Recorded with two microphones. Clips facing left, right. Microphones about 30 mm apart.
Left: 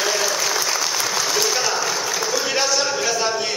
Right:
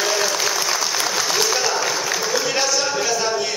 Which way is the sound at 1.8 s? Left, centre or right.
Centre.